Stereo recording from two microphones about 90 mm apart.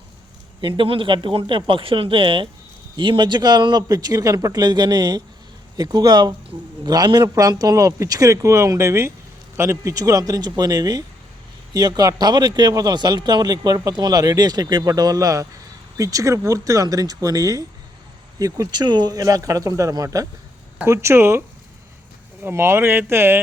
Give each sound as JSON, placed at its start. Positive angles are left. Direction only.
{"t": 0.8, "sound": "speech", "side_deg": -70}
{"t": 2.9, "sound": "speech", "side_deg": -60}
{"t": 20.8, "sound": "speech", "side_deg": -30}
{"t": 22.4, "sound": "speech", "side_deg": -25}